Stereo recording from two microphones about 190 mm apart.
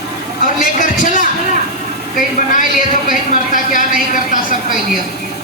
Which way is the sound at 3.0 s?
45° left (ahead or behind).